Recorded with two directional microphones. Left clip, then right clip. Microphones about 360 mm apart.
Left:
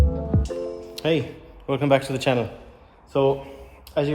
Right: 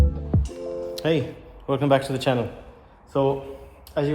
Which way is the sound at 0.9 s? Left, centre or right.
Centre.